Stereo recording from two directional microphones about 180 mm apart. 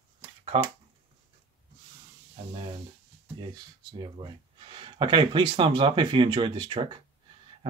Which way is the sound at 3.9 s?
25° right (ahead or behind).